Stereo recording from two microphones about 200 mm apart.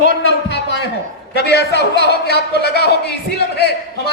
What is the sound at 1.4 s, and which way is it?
A man's voice, 55° left (ahead or behind).